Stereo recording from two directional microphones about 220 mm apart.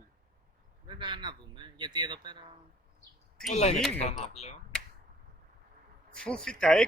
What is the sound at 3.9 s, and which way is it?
Speech, 30° left (ahead or behind).